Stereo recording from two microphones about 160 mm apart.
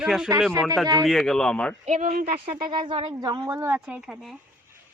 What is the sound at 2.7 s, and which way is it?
Speech, 30° right (ahead or behind).